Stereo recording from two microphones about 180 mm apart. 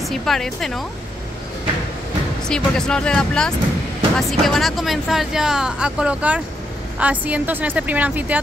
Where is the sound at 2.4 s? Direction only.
5° left (ahead or behind).